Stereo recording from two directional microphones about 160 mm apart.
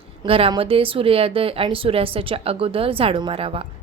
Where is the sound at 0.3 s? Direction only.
35° right (ahead or behind).